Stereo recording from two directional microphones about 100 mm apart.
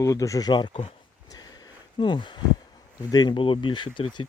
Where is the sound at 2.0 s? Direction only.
55° left (ahead or behind).